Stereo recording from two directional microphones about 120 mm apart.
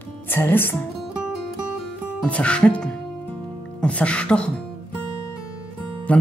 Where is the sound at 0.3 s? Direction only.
15° left (ahead or behind).